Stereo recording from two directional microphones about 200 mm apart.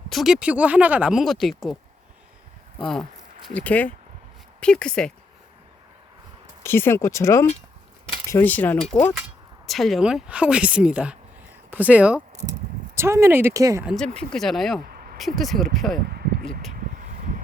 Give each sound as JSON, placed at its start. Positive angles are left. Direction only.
{"t": 0.1, "sound": "speech", "side_deg": 0}
{"t": 6.6, "sound": "speech", "side_deg": 10}
{"t": 13.8, "sound": "speech", "side_deg": 0}
{"t": 16.0, "sound": "a sound", "side_deg": -50}